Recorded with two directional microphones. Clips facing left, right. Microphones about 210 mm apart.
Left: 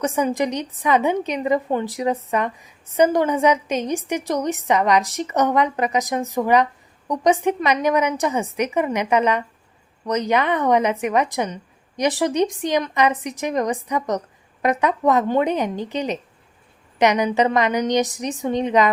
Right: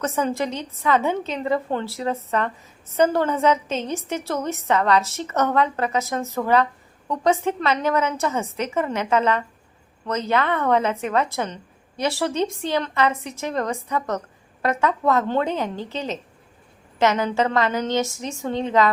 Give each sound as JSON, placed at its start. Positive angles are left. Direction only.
{"t": 0.0, "sound": "a woman's voice", "side_deg": 15}